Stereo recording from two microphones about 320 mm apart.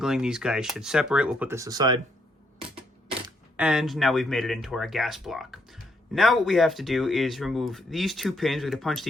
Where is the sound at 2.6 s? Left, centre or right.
Centre.